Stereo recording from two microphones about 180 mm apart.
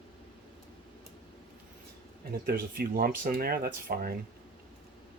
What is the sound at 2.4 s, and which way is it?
Speech, 60° right (ahead or behind).